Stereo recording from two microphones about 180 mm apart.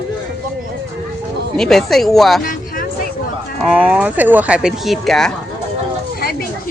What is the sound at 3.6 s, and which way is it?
Speech, 5° right (ahead or behind).